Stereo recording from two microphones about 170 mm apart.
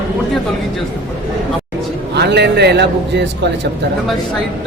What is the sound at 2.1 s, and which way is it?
A man's voice, 80° right.